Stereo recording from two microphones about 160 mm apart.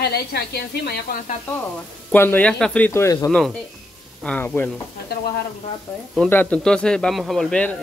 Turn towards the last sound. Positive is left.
turn(degrees=5)  # may be behind; listen again after turning